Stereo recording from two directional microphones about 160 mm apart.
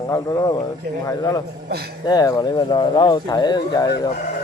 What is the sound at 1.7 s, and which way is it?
Speech, 80° right.